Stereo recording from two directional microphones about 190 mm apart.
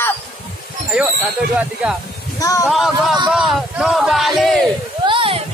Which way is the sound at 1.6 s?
5° right (ahead or behind).